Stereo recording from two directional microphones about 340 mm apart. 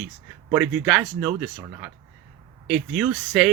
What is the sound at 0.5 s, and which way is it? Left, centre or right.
Speech, centre.